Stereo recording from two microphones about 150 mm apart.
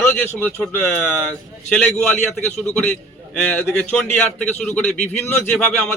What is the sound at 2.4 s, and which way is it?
Speech, 10° left (ahead or behind).